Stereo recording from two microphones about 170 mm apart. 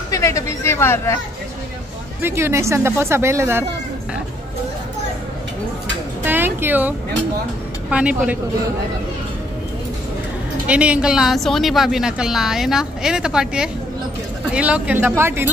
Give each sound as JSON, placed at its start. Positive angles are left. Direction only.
{"t": 0.1, "sound": "speech", "side_deg": 15}
{"t": 2.2, "sound": "speech", "side_deg": -15}
{"t": 6.2, "sound": "music", "side_deg": -10}
{"t": 7.9, "sound": "speech", "side_deg": -5}
{"t": 10.7, "sound": "a woman's voice", "side_deg": -5}